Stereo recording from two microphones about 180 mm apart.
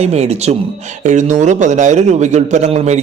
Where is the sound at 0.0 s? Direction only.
35° right (ahead or behind).